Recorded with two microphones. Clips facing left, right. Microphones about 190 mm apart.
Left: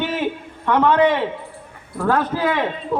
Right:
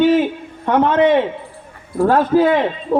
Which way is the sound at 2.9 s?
40° right (ahead or behind).